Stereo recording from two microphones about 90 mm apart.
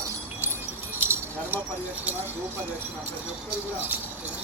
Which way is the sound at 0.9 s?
25° right (ahead or behind).